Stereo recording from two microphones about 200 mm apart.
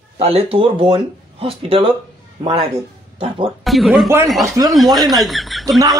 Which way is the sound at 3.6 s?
Centre (ahead or behind).